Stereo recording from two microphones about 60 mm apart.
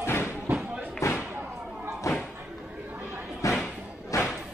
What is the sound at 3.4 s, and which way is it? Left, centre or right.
Slam, left.